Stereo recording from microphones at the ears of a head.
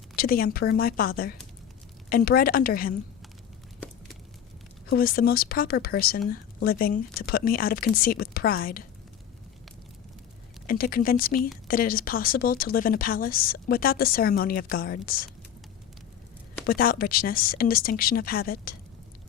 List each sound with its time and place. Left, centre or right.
0.2 s speech: left
4.9 s speech: left
10.7 s speech: left
16.6 s speech: left